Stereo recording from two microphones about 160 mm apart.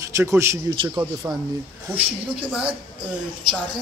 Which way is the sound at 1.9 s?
10° right (ahead or behind).